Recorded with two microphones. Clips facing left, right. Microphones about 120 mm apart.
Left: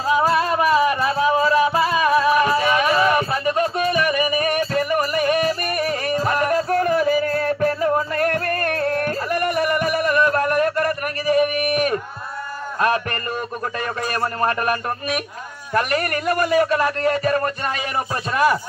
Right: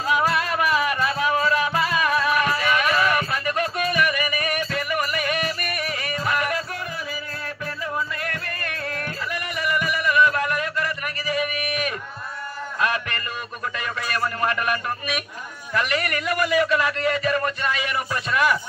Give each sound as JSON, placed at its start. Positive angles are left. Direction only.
{"t": 0.0, "sound": "music", "side_deg": 30}
{"t": 13.7, "sound": "a sound", "side_deg": 40}
{"t": 15.7, "sound": "a man's voice", "side_deg": 45}